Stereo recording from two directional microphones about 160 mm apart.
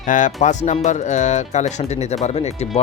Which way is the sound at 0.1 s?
50° left (ahead or behind).